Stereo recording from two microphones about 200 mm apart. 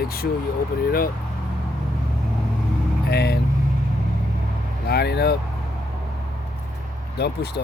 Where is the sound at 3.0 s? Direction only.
55° left (ahead or behind).